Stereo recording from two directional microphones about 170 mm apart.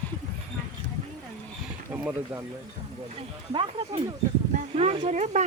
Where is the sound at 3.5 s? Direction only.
30° right (ahead or behind).